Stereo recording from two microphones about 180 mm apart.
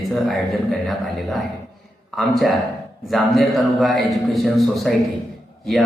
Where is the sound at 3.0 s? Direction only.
Centre (ahead or behind).